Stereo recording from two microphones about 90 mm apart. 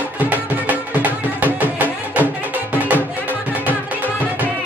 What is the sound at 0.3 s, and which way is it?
Music, 20° right (ahead or behind).